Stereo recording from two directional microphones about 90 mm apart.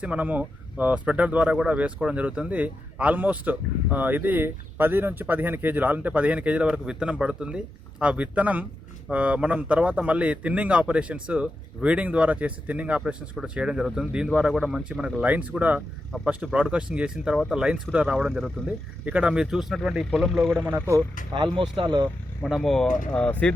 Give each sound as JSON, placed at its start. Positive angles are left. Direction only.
{"t": 0.0, "sound": "speech", "side_deg": -15}
{"t": 18.1, "sound": "speech", "side_deg": 5}
{"t": 19.0, "sound": "speech", "side_deg": -15}
{"t": 20.7, "sound": "speech", "side_deg": -25}
{"t": 21.3, "sound": "speech", "side_deg": -55}
{"t": 22.4, "sound": "speech", "side_deg": 0}
{"t": 23.1, "sound": "speech", "side_deg": 15}